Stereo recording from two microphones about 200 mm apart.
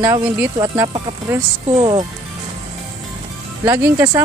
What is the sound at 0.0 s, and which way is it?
A woman's voice, 15° right (ahead or behind).